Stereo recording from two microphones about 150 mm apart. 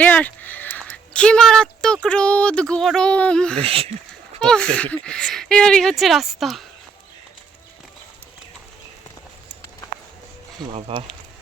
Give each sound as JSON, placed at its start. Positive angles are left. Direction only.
{"t": 0.0, "sound": "speech", "side_deg": 10}
{"t": 3.6, "sound": "speech", "side_deg": -40}
{"t": 4.4, "sound": "speech", "side_deg": 5}
{"t": 10.7, "sound": "speech", "side_deg": -40}